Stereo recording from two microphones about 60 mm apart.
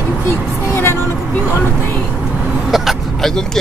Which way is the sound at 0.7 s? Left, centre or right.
Left.